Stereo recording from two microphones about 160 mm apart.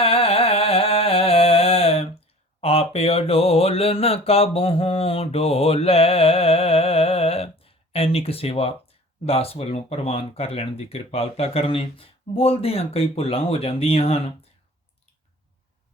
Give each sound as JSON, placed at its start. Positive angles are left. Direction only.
{"t": 0.0, "sound": "a sound", "side_deg": 35}
{"t": 2.6, "sound": "mantra", "side_deg": 40}
{"t": 9.2, "sound": "speech", "side_deg": 40}